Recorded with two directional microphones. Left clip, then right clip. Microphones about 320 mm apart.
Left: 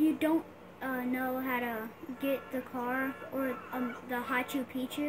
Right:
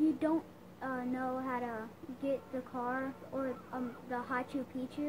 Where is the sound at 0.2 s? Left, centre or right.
Left.